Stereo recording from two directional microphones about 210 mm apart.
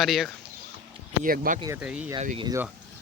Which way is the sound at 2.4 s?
15° right (ahead or behind).